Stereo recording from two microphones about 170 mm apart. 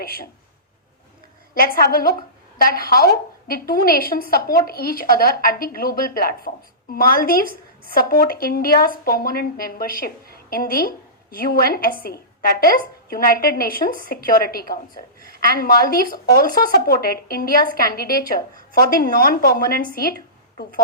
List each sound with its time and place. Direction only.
0.0 s speech: 60° left (ahead or behind)
1.5 s a woman's voice: 60° left (ahead or behind)